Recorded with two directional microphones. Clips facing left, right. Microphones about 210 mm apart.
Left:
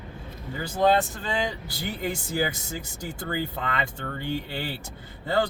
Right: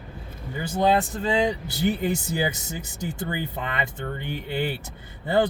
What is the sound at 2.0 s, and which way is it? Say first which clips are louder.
Speech: right 2 dB; 20° right (ahead or behind).